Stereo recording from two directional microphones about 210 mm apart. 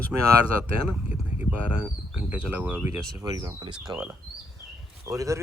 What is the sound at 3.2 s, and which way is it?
Speech, 20° right (ahead or behind).